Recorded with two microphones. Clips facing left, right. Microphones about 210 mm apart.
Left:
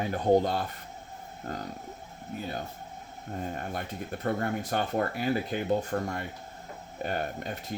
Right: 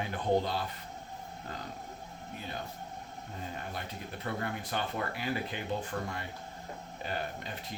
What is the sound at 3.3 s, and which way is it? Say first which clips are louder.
Speech: left 7 dB; 50° left (ahead or behind).